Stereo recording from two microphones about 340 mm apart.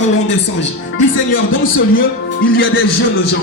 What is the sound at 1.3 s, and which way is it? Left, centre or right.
A man's voice, left.